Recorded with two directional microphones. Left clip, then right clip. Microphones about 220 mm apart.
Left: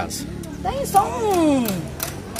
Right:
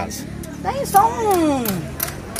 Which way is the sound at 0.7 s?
Centre (ahead or behind).